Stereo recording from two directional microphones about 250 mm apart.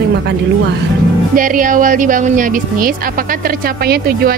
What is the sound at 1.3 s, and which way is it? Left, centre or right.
Speech, right.